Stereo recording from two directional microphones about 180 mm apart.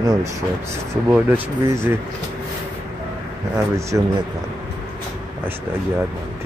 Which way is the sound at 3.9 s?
15° right (ahead or behind).